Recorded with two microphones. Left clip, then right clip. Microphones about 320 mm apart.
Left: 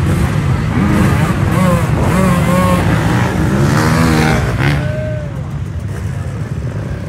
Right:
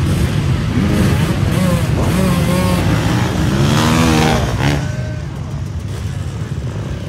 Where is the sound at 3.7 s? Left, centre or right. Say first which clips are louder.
Right 1 dB; centre.